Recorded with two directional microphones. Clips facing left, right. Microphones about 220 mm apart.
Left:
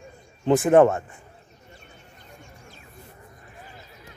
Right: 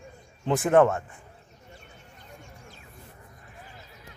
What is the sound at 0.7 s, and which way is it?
Speech, 20° left (ahead or behind).